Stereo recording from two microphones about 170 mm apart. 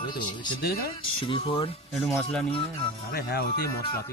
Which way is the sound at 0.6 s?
65° left (ahead or behind).